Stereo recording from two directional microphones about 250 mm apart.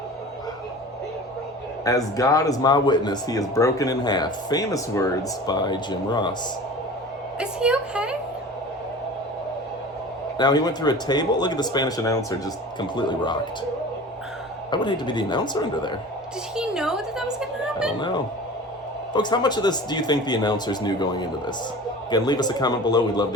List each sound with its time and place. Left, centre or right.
1.8 s speech: centre
7.3 s a woman's voice: centre
10.3 s speech: centre
14.7 s speech: centre
16.6 s a sound: centre
19.1 s speech: centre